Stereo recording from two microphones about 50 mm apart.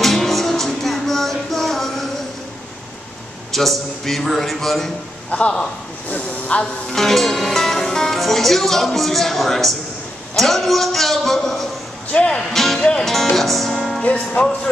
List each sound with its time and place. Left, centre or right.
0.0 s music: centre
3.5 s speech: centre
5.3 s speech: left
6.0 s hiss: left
6.9 s music: centre
8.2 s speech: centre
12.1 s speech: left
12.4 s speech: centre
14.0 s speech: left